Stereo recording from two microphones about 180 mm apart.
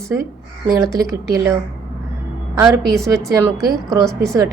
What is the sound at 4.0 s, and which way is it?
Speech, centre (ahead or behind).